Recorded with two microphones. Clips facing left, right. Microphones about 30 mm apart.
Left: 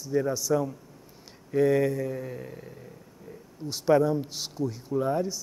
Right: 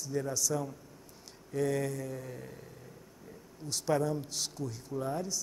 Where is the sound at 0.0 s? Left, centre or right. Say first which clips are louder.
Left 7 dB; left.